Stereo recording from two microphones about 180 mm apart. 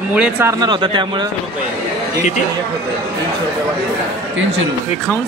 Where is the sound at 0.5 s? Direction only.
25° right (ahead or behind).